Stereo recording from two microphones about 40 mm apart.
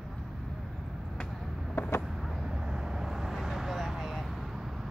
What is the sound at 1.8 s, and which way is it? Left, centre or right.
Vehicle, left.